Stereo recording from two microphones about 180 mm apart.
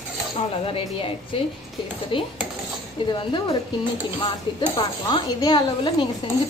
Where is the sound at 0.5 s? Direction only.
30° left (ahead or behind).